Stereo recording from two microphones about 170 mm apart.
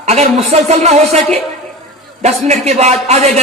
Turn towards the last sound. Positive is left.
turn(degrees=-40)  # may be behind; listen again after turning